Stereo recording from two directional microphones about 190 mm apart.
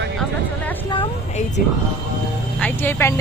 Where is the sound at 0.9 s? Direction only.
30° left (ahead or behind).